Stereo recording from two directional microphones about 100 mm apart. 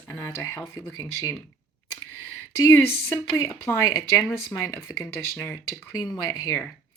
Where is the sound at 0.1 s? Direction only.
30° left (ahead or behind).